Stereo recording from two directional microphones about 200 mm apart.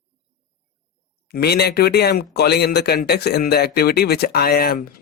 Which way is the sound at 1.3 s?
55° left (ahead or behind).